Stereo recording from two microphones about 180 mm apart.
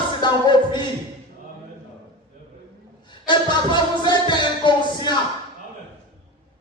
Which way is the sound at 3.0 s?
25° left (ahead or behind).